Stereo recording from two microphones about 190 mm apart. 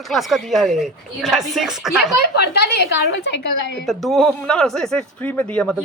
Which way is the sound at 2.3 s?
60° left (ahead or behind).